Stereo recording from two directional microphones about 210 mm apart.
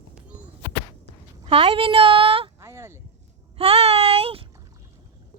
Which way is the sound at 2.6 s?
10° right (ahead or behind).